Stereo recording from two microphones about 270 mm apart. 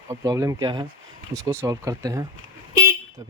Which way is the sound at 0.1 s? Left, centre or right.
Centre.